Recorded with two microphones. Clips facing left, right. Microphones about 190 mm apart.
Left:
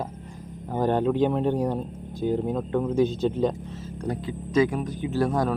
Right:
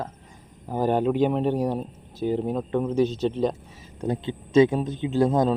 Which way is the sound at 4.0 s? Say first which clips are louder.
Right 3 dB; 25° right (ahead or behind).